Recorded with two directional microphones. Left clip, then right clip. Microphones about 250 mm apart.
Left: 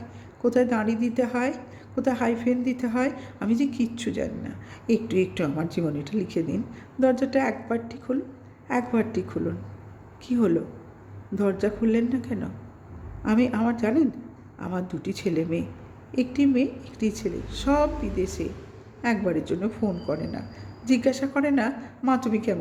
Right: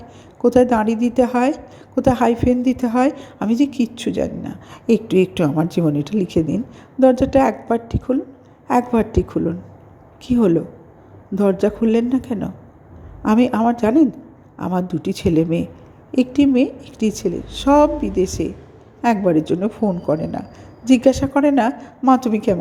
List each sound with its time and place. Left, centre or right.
0.4 s a woman's voice: right